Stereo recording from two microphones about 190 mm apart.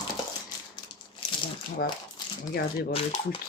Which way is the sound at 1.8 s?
50° left (ahead or behind).